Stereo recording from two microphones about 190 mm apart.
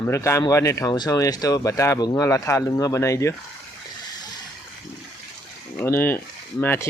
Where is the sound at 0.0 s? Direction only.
15° left (ahead or behind).